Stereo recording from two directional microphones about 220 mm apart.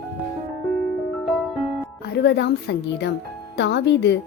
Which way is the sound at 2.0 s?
50° left (ahead or behind).